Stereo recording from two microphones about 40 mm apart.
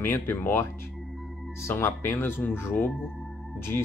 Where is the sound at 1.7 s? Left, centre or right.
Left.